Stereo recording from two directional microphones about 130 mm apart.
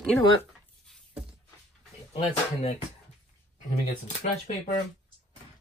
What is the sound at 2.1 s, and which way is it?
Speech, 55° left (ahead or behind).